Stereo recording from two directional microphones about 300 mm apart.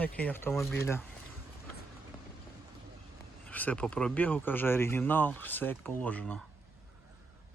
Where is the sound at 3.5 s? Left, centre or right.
Centre.